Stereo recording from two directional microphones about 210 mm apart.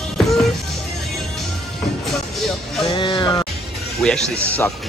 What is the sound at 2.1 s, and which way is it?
Music, centre (ahead or behind).